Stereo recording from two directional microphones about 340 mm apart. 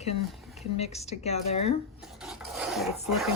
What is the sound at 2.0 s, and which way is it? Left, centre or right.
Filing, centre.